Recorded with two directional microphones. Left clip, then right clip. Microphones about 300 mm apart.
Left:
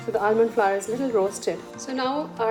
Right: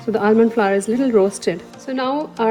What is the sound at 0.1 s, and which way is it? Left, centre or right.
A woman's voice, right.